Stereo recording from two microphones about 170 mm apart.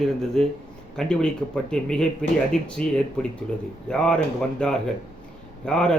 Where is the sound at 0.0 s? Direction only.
5° left (ahead or behind).